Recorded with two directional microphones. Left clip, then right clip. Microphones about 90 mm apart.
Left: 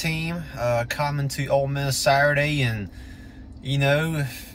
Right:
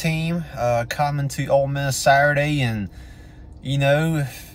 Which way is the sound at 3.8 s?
20° right (ahead or behind).